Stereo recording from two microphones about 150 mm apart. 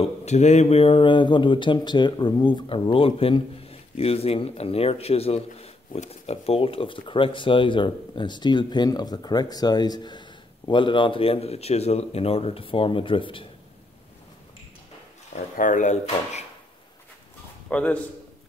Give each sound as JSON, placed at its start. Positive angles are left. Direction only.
{"t": 0.0, "sound": "speech", "side_deg": 50}
{"t": 15.5, "sound": "speech", "side_deg": 60}
{"t": 17.6, "sound": "a man's voice", "side_deg": 10}